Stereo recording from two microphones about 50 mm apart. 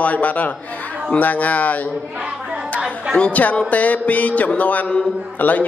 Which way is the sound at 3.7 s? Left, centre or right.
Left.